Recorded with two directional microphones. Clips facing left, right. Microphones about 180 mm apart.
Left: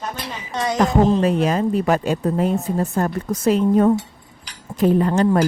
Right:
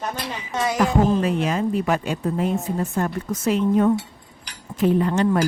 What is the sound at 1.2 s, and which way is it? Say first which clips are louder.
Speech: left 4 dB; 40° left (ahead or behind).